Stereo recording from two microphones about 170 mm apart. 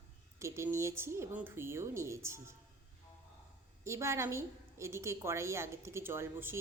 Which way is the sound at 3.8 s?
15° right (ahead or behind).